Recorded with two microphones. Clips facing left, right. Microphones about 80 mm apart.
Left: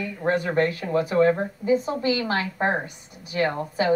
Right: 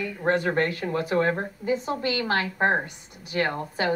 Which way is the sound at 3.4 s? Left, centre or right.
Left.